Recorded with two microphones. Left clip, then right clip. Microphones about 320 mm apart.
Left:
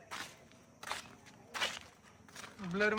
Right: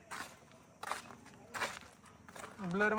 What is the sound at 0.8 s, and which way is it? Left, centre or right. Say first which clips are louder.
Walk: right 1 dB; centre.